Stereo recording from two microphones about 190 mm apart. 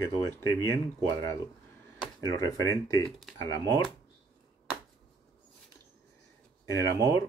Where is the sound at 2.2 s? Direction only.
15° left (ahead or behind).